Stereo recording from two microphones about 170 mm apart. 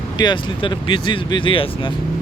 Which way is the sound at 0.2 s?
25° left (ahead or behind).